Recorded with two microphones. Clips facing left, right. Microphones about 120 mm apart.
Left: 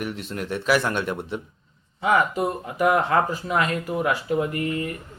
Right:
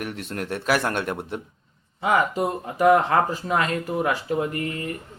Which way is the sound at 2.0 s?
30° right (ahead or behind).